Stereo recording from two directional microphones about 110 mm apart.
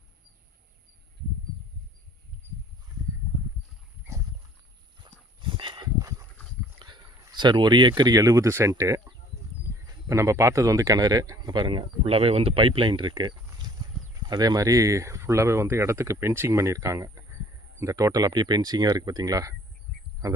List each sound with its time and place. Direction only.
5.1 s dog: 40° right (ahead or behind)
5.4 s horse: 50° right (ahead or behind)
6.0 s a sound: 30° right (ahead or behind)
6.7 s speech: 45° right (ahead or behind)
11.5 s speech: 50° right (ahead or behind); by 19.5 s 30° right (ahead or behind)